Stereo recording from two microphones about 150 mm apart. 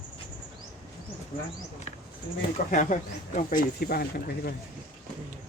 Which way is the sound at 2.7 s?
55° left (ahead or behind).